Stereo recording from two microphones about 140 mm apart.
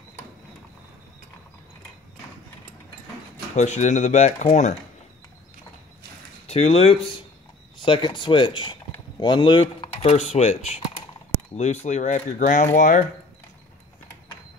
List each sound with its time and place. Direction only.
3.5 s speech: 55° left (ahead or behind)
6.4 s speech: 45° left (ahead or behind); by 13.0 s 70° left (ahead or behind)